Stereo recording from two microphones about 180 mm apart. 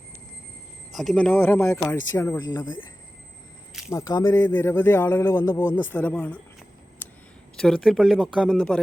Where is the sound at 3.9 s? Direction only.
15° left (ahead or behind).